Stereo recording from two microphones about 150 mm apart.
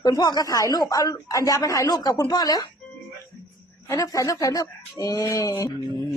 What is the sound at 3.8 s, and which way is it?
Speech, 20° left (ahead or behind).